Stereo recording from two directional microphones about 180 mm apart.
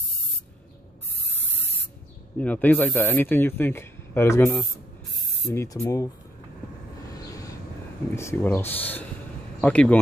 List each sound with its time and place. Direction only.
2.3 s speech: 10° left (ahead or behind)
8.2 s speech: 15° left (ahead or behind)